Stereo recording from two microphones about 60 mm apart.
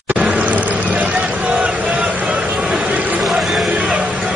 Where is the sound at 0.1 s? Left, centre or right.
Right.